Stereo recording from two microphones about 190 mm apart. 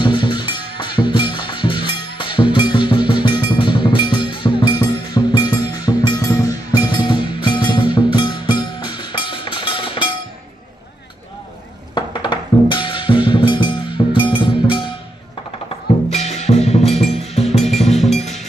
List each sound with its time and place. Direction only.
0.0 s music: 25° left (ahead or behind)
11.9 s music: 25° left (ahead or behind)
16.1 s music: 35° left (ahead or behind)
17.9 s music: centre (ahead or behind)